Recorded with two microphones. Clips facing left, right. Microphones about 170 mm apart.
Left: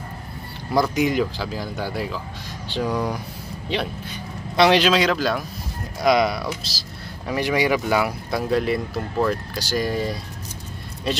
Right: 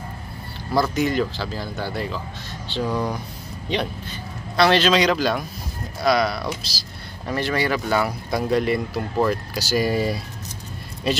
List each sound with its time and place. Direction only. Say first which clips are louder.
0.9 s speech: left 1 dB; 10° left (ahead or behind)
6.0 s speech: left 2 dB; 20° left (ahead or behind)
6.4 s speech: even; centre (ahead or behind)
7.2 s speech: left 2 dB; 15° left (ahead or behind); by 11.2 s 5° right (ahead or behind)